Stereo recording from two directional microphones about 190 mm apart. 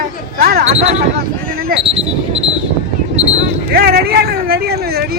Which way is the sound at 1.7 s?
50° right (ahead or behind).